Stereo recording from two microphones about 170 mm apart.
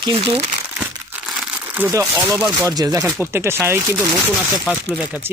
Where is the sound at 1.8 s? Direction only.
15° right (ahead or behind).